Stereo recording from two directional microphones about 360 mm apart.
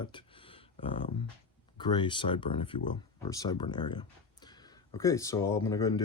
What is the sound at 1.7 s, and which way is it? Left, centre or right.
Speech, centre.